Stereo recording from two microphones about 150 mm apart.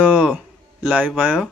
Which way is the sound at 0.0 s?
10° right (ahead or behind).